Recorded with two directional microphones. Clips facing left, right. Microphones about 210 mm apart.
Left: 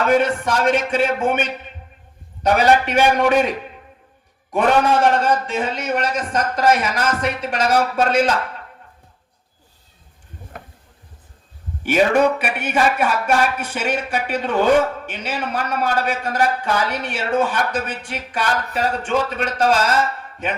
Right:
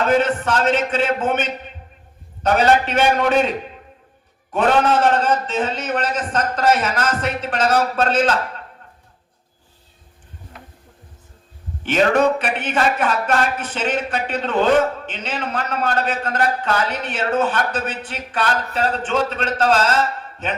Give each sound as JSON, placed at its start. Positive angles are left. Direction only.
{"t": 0.1, "sound": "a man's voice", "side_deg": 10}
{"t": 4.5, "sound": "a man's voice", "side_deg": 10}
{"t": 10.5, "sound": "a sound", "side_deg": 50}
{"t": 11.8, "sound": "a man's voice", "side_deg": 10}